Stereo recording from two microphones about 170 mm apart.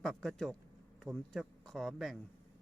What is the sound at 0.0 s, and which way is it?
Speech, centre (ahead or behind).